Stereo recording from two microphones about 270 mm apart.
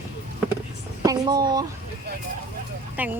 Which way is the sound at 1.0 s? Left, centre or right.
Centre.